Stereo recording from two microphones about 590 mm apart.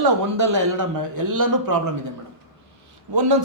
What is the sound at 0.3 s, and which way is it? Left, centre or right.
A man's voice, right.